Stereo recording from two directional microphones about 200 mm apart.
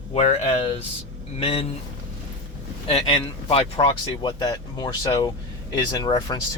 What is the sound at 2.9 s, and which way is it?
Speech, 25° left (ahead or behind).